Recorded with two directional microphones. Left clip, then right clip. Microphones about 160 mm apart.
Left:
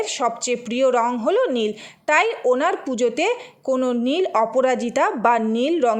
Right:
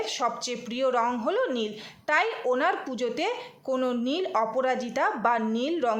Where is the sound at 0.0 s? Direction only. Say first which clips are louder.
Left 6 dB; 40° left (ahead or behind).